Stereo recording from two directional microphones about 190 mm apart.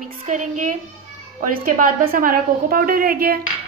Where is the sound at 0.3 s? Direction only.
40° right (ahead or behind).